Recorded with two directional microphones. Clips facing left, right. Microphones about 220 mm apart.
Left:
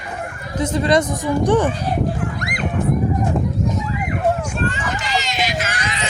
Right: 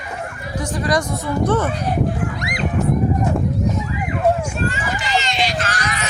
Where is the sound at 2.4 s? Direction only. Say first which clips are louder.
Right 1 dB; 55° left (ahead or behind).